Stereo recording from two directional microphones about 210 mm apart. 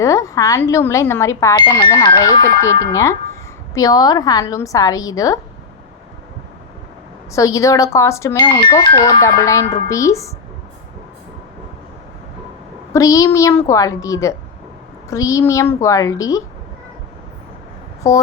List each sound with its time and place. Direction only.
0.0 s speech: 15° left (ahead or behind)
7.3 s speech: 15° left (ahead or behind)
12.9 s speech: 15° left (ahead or behind)
18.0 s speech: 15° left (ahead or behind)